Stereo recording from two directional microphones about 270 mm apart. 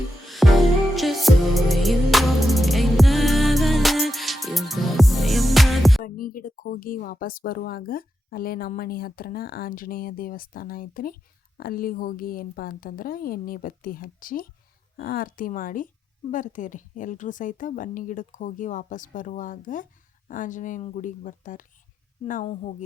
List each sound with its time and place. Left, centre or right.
0.3 s music: centre
6.0 s a woman's voice: left